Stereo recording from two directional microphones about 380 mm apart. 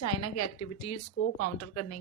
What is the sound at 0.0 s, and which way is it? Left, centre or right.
A woman's voice, left.